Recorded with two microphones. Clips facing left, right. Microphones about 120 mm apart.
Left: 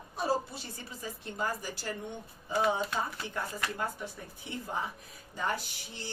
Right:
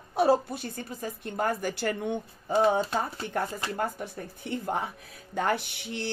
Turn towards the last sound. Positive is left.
turn(degrees=-70)  # may be behind; listen again after turning